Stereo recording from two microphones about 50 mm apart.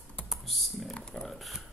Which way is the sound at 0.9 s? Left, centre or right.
Centre.